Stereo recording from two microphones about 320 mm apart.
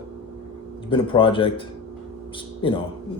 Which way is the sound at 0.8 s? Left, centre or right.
Centre.